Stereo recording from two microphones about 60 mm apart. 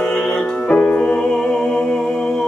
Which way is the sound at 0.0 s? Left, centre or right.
Centre.